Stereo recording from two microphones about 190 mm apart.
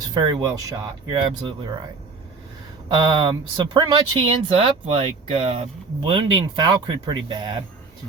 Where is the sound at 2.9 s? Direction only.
25° right (ahead or behind).